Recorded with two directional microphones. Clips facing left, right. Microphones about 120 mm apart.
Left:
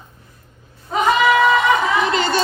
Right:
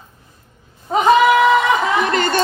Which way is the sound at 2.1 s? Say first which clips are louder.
Right 1 dB; 55° right (ahead or behind).